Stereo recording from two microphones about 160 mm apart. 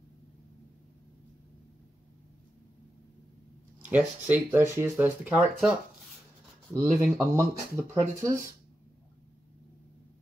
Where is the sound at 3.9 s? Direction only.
10° right (ahead or behind).